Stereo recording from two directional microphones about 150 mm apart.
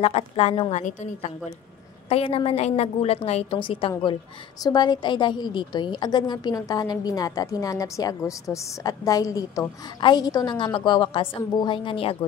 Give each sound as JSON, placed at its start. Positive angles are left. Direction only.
{"t": 0.0, "sound": "a woman's voice", "side_deg": 45}